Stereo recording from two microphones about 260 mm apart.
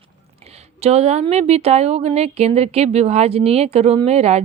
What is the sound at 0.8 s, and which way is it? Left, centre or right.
Speech, right.